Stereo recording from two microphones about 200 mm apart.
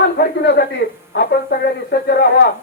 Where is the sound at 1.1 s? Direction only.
55° left (ahead or behind).